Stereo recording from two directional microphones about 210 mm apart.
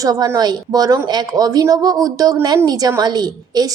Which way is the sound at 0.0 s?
15° right (ahead or behind).